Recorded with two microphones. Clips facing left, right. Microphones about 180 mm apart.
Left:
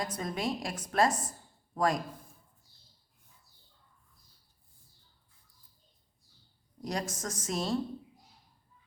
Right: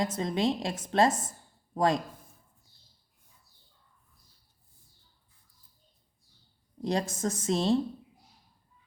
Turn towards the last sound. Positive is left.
turn(degrees=-25)  # may be behind; listen again after turning